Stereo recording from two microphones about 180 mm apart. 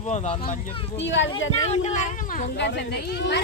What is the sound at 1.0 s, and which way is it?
Speech, 90° left.